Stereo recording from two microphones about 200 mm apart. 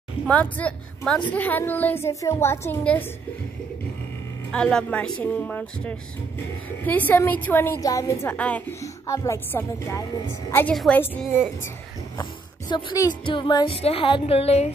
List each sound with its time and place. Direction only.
0.3 s a woman's voice: 5° left (ahead or behind)
4.5 s a woman's voice: 5° left (ahead or behind)
12.2 s speech: 20° left (ahead or behind)